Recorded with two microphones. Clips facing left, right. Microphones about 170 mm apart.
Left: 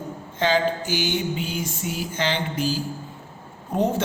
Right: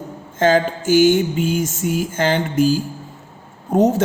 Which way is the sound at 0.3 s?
45° right (ahead or behind).